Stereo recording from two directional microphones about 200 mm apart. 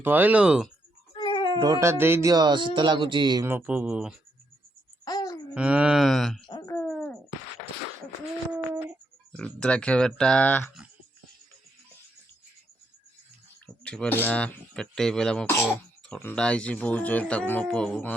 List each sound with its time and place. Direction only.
0.0 s speech: 10° right (ahead or behind)
1.1 s cat: 25° left (ahead or behind)
1.5 s speech: 20° right (ahead or behind)
5.0 s a sound: 20° left (ahead or behind)
5.5 s speech: 5° right (ahead or behind)
6.5 s dog: 20° left (ahead or behind)
6.8 s a sound: 5° left (ahead or behind)
9.3 s speech: 5° left (ahead or behind)
13.8 s speech: 5° left (ahead or behind)